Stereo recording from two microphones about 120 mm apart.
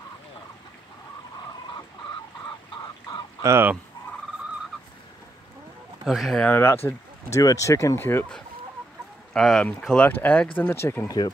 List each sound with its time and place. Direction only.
3.4 s fowl: 20° right (ahead or behind)
6.0 s speech: centre (ahead or behind)
6.4 s speech: 20° left (ahead or behind)
9.3 s speech: 5° left (ahead or behind); by 11.1 s 20° left (ahead or behind)